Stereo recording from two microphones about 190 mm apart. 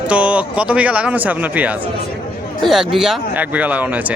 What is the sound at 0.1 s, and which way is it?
Speech, 5° right (ahead or behind).